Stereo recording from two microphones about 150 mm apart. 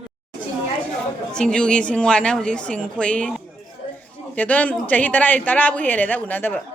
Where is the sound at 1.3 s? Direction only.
5° left (ahead or behind).